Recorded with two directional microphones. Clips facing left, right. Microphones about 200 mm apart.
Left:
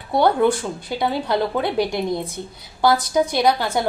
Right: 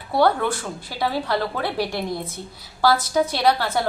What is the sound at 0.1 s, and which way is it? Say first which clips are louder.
A woman's voice: left 3 dB; 20° left (ahead or behind).